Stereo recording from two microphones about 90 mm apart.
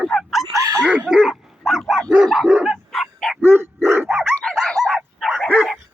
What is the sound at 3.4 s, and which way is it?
Dog, 25° right (ahead or behind).